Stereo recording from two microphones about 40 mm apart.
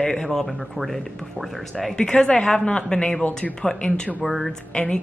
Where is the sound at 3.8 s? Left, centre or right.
Left.